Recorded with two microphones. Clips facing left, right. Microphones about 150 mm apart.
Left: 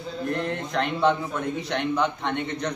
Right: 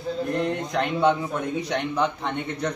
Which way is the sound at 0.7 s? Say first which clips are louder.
Right 1 dB; 10° right (ahead or behind).